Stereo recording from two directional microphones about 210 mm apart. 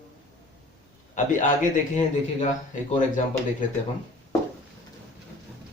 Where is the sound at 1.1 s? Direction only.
35° left (ahead or behind).